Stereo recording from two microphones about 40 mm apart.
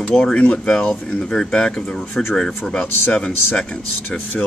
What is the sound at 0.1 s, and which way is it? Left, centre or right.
Speech, centre.